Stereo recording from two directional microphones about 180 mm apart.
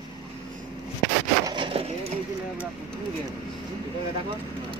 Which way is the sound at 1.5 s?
25° right (ahead or behind).